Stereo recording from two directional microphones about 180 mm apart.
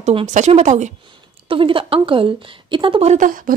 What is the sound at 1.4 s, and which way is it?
Speech, 30° right (ahead or behind).